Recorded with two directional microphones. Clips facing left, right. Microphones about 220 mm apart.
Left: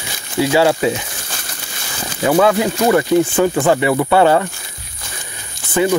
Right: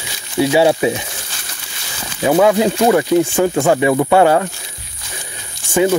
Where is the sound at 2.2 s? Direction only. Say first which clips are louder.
Right 1 dB; 15° right (ahead or behind).